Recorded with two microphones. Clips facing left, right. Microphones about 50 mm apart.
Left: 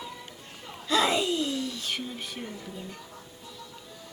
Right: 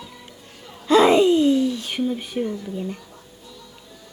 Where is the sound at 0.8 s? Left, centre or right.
Right.